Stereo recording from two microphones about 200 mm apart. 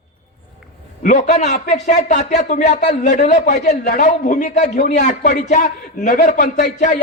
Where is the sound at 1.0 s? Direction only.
35° left (ahead or behind).